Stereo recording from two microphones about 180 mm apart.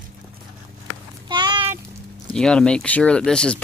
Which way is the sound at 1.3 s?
25° right (ahead or behind).